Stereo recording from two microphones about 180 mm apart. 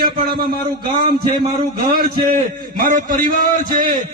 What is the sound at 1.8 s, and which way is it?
A man's voice, 45° right (ahead or behind).